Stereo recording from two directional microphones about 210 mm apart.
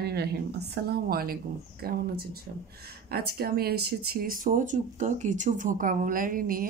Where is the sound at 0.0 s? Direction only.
50° right (ahead or behind).